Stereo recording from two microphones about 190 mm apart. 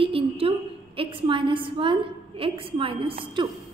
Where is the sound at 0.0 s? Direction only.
30° right (ahead or behind).